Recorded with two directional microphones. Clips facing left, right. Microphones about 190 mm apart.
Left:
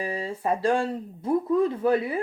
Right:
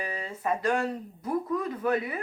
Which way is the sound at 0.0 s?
30° left (ahead or behind).